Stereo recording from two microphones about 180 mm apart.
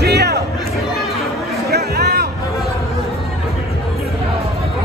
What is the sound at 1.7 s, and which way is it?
Music, 65° right (ahead or behind).